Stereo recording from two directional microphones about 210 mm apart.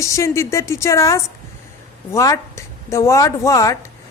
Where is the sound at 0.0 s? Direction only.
15° left (ahead or behind).